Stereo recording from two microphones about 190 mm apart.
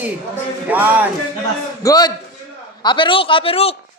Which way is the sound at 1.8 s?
20° left (ahead or behind).